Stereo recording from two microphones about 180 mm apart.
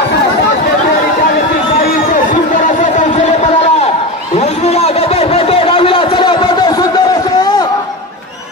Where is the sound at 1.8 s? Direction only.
45° left (ahead or behind).